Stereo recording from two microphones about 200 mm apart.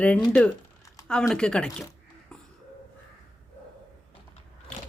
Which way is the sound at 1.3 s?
5° left (ahead or behind).